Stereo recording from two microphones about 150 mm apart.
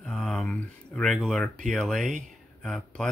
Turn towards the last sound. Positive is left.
turn(degrees=5)  # may be behind; listen again after turning